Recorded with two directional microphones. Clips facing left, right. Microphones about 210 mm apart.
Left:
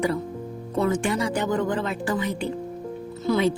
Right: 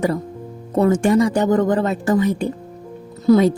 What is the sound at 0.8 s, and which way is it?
A woman's voice, 40° right (ahead or behind).